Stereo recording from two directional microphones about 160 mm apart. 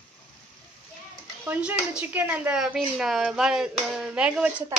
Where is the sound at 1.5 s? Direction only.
5° right (ahead or behind).